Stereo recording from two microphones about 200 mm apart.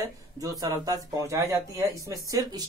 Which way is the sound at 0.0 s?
15° right (ahead or behind).